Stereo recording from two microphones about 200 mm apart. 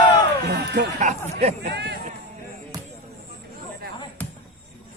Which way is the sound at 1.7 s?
55° right (ahead or behind).